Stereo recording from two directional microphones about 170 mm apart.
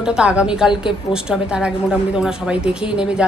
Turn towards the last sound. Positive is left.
turn(degrees=-5)  # may be behind; listen again after turning